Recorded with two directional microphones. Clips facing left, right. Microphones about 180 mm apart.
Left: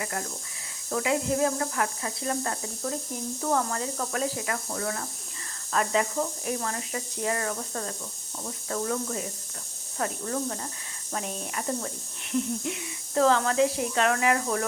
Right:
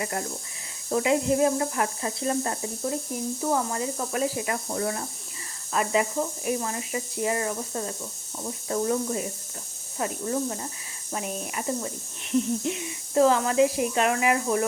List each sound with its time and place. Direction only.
0.0 s speech: 25° right (ahead or behind)
3.4 s speech: 10° right (ahead or behind)
5.7 s speech: 10° right (ahead or behind)
12.3 s speech: 25° right (ahead or behind)
13.2 s speech: 10° right (ahead or behind)